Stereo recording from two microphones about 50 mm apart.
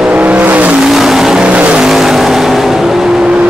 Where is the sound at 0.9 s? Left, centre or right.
Centre.